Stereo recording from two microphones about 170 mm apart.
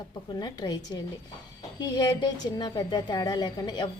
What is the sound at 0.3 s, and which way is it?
A woman's voice, 25° left (ahead or behind).